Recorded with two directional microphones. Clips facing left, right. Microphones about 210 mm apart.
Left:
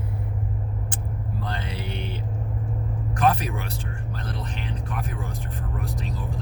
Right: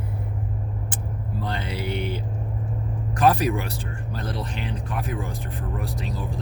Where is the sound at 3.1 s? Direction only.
35° right (ahead or behind).